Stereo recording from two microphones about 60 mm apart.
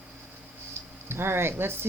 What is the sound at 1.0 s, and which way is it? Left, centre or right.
Speech, right.